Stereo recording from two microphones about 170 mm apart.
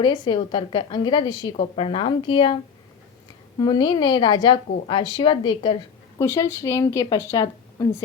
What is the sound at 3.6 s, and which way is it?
A woman's voice, 25° left (ahead or behind).